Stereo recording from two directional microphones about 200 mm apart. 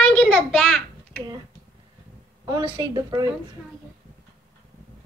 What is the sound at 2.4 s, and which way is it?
Speech, 15° right (ahead or behind).